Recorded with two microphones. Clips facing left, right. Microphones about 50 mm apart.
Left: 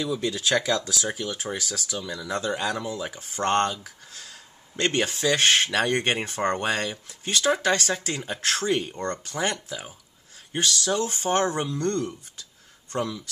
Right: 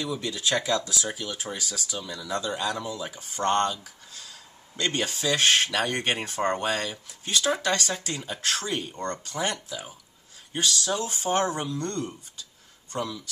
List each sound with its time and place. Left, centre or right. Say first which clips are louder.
0.2 s speech: left 3 dB; left